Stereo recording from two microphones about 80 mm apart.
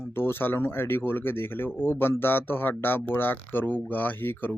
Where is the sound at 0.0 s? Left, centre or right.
Left.